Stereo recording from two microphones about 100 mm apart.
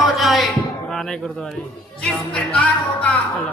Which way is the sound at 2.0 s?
10° left (ahead or behind).